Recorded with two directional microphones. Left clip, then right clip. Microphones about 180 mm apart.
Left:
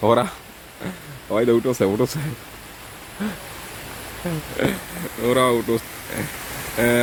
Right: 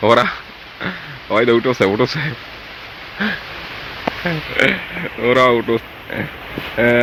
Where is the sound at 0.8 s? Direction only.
20° left (ahead or behind).